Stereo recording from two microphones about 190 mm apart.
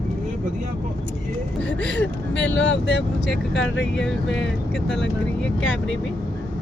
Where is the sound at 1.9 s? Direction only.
70° left (ahead or behind).